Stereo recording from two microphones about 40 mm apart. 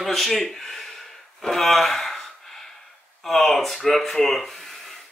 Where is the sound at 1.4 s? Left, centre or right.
Centre.